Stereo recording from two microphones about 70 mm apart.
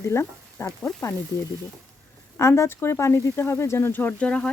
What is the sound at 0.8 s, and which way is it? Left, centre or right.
Speech, centre.